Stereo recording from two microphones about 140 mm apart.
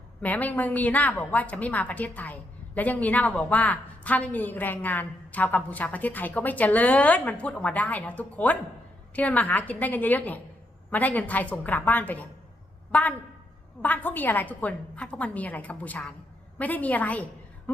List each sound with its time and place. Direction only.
0.2 s a woman's voice: 10° left (ahead or behind)